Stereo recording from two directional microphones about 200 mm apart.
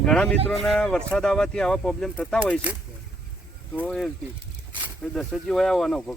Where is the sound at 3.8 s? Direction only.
5° left (ahead or behind).